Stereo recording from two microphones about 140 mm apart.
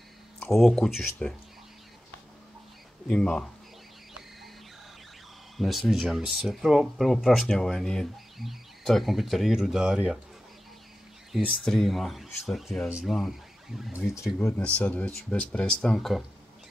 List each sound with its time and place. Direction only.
0.6 s speech: centre (ahead or behind)
3.1 s speech: 5° left (ahead or behind)
5.6 s speech: centre (ahead or behind)
11.3 s speech: centre (ahead or behind)
14.1 s speech: 20° left (ahead or behind); by 16.3 s centre (ahead or behind)